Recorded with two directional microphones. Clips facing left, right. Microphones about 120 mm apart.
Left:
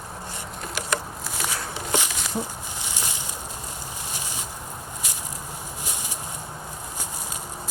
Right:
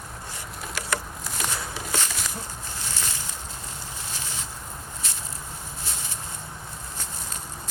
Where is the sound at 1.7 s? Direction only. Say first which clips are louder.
Left 3 dB; 15° left (ahead or behind).